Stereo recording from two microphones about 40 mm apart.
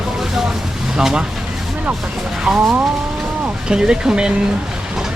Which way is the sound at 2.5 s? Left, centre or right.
Right.